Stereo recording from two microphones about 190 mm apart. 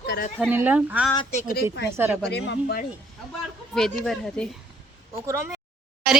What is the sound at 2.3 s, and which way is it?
Speech, 60° left (ahead or behind).